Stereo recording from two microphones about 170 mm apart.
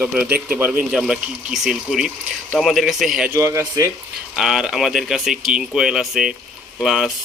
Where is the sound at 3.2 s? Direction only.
15° right (ahead or behind).